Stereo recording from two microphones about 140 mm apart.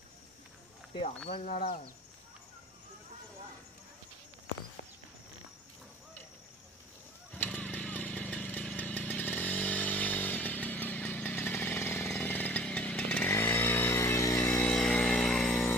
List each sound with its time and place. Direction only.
1.3 s speech: 90° left
7.3 s vehicle: 10° left (ahead or behind)
14.6 s a sound: 5° left (ahead or behind)